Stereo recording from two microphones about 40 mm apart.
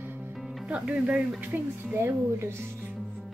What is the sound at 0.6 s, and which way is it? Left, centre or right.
Speech, right.